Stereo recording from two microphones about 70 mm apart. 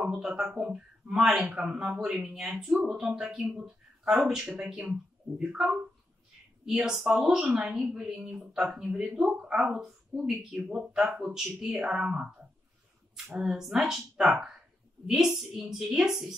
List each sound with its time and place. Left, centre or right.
0.0 s a woman's voice: centre
13.4 s a woman's voice: centre